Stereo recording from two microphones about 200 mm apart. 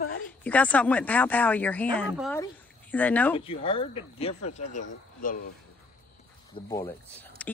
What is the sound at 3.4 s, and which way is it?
Speech, 25° left (ahead or behind).